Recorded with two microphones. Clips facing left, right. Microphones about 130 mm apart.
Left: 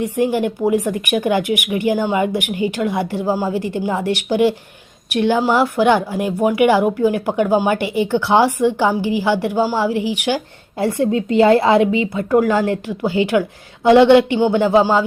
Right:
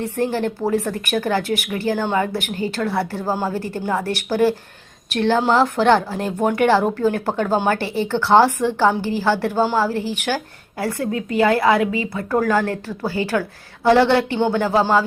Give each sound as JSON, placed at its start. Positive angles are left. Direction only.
{"t": 0.0, "sound": "speech", "side_deg": 15}